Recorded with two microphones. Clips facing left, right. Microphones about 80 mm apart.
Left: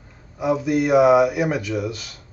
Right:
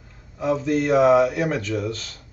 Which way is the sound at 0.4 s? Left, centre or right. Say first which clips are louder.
Left 1 dB; centre.